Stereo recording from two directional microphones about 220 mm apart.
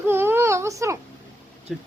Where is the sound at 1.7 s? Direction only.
Centre (ahead or behind).